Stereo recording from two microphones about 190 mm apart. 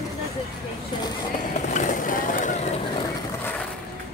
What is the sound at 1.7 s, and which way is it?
Vehicle, 40° left (ahead or behind).